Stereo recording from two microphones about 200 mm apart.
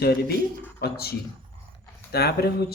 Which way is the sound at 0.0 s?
50° left (ahead or behind).